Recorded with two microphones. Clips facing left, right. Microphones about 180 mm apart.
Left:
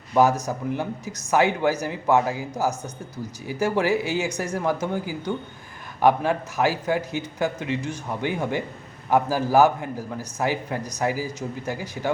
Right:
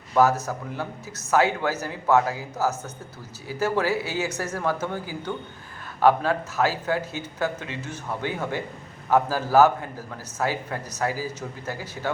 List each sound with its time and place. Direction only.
0.1 s a man's voice: 15° left (ahead or behind)